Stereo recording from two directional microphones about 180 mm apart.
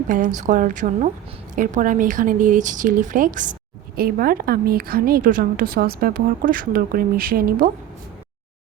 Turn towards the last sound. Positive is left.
turn(degrees=-55)  # may be behind; listen again after turning